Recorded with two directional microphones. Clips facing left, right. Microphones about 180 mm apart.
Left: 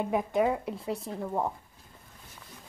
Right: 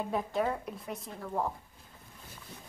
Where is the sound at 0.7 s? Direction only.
25° left (ahead or behind).